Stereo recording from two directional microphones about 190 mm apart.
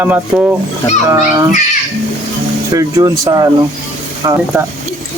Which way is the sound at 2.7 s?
15° right (ahead or behind).